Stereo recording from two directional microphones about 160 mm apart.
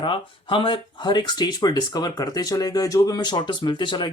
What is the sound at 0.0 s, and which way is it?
Speech, 30° left (ahead or behind).